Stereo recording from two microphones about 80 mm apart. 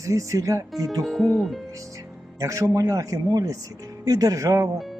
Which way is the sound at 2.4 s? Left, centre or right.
Right.